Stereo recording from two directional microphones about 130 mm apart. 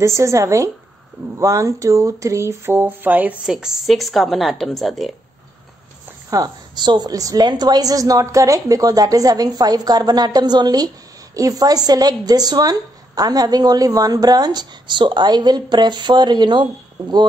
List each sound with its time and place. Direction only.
0.0 s a woman's voice: 20° right (ahead or behind); by 5.1 s centre (ahead or behind)
6.3 s a woman's voice: 30° right (ahead or behind)